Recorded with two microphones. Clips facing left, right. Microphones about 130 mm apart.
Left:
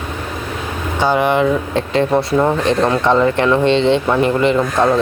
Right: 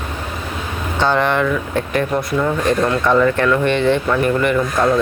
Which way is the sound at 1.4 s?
30° left (ahead or behind).